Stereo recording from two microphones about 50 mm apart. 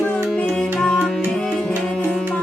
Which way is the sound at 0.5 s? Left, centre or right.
Centre.